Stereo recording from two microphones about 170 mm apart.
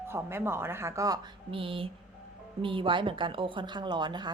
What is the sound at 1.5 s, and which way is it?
A woman's voice, 30° right (ahead or behind).